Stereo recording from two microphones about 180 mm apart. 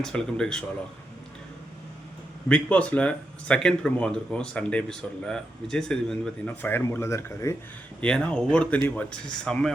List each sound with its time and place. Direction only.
0.0 s speech: 5° left (ahead or behind)
2.5 s speech: 5° left (ahead or behind)
8.0 s speech: 5° left (ahead or behind)